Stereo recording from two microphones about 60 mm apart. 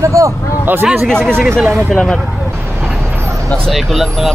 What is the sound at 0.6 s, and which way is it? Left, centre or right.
Speech, right.